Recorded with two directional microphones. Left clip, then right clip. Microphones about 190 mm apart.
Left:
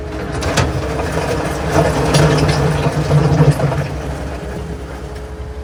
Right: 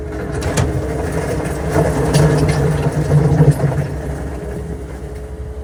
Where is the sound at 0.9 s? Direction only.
Centre (ahead or behind).